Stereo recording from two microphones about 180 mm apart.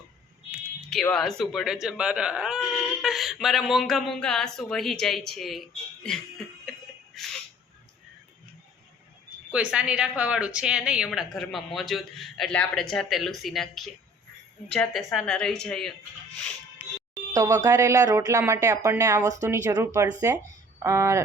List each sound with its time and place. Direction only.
1.0 s speech: 5° left (ahead or behind)
9.5 s speech: 5° right (ahead or behind)
17.3 s speech: 20° right (ahead or behind)